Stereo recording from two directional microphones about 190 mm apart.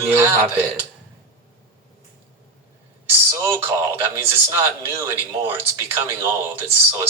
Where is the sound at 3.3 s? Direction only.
15° right (ahead or behind).